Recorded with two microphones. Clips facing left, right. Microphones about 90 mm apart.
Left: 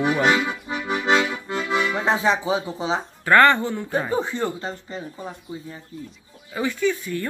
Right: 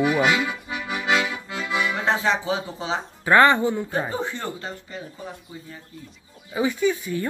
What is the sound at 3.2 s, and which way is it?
Speech, 10° right (ahead or behind).